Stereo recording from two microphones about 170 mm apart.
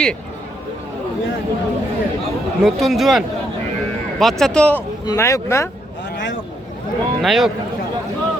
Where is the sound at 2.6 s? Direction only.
Centre (ahead or behind).